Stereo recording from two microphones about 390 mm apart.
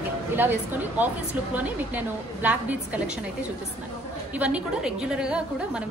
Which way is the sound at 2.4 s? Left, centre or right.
Centre.